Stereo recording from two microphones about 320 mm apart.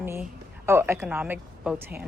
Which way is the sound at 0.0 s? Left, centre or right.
Centre.